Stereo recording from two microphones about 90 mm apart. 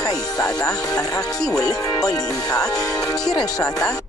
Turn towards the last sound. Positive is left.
turn(degrees=40)  # may be behind; listen again after turning